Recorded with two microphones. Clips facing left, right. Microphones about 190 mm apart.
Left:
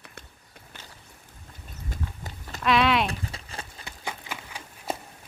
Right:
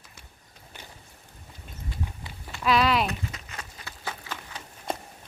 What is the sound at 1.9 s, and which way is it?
Walk, 45° left (ahead or behind).